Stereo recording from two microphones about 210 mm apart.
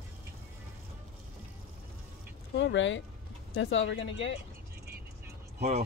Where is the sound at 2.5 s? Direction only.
60° left (ahead or behind).